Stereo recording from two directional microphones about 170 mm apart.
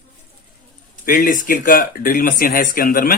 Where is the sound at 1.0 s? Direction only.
55° left (ahead or behind).